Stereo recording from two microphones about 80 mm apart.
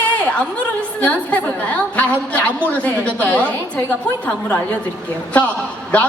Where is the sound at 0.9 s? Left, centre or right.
Centre.